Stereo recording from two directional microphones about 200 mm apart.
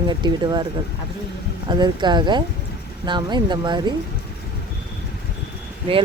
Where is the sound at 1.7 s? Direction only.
20° right (ahead or behind).